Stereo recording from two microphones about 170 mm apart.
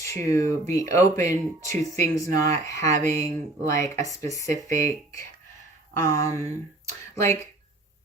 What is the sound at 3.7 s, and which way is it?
Speech, 20° left (ahead or behind).